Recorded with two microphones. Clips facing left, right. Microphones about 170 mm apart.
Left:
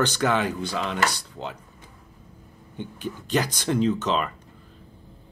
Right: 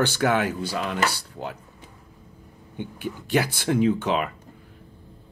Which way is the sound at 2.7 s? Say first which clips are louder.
Right 1 dB; 10° right (ahead or behind).